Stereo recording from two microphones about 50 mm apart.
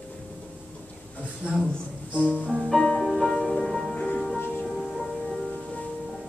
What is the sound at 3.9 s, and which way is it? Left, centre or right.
Music, left.